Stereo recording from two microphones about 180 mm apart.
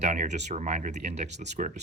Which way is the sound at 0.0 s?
45° right (ahead or behind).